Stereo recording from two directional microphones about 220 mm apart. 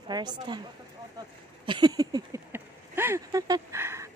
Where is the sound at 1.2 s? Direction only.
20° right (ahead or behind).